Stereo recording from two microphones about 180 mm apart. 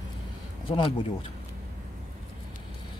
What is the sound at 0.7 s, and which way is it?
Speech, 30° left (ahead or behind).